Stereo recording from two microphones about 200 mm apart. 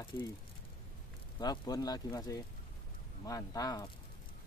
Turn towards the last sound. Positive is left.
turn(degrees=20)  # may be behind; listen again after turning